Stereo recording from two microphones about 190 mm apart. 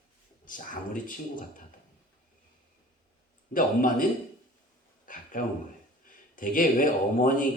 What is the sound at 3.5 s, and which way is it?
Speech, 45° left (ahead or behind).